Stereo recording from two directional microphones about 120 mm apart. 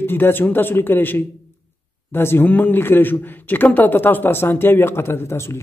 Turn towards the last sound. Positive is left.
turn(degrees=20)  # may be behind; listen again after turning